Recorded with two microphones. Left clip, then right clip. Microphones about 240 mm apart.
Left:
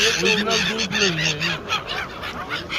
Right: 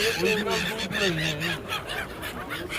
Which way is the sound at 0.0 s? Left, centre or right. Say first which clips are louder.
Left 6 dB; centre.